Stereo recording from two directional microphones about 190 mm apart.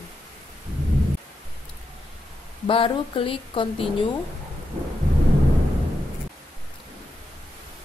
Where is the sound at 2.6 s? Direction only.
30° left (ahead or behind).